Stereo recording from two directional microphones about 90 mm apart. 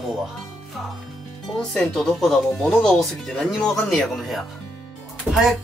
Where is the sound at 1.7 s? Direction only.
5° left (ahead or behind).